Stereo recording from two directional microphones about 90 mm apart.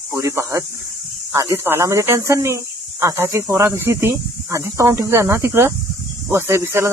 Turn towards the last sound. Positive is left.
turn(degrees=-30)  # may be behind; listen again after turning